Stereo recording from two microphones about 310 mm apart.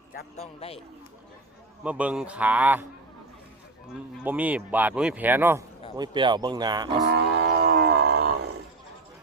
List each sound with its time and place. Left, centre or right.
0.1 s a man's voice: left
1.8 s speech: centre
4.2 s speech: centre
6.9 s wild animals: right